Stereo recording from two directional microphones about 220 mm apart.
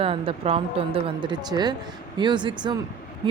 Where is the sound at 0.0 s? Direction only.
25° right (ahead or behind).